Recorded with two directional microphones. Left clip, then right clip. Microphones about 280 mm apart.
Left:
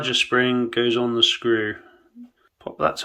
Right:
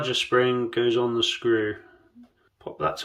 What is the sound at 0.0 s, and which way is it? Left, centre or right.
Speech, centre.